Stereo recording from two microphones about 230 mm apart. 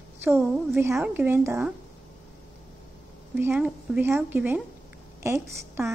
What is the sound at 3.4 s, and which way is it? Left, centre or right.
A woman's voice, centre.